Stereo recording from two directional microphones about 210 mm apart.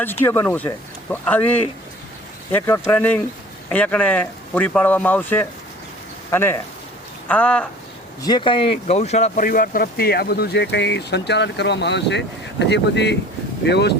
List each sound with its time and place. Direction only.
0.3 s speech: 10° left (ahead or behind)
8.2 s speech: 20° left (ahead or behind); by 13.9 s 55° left (ahead or behind)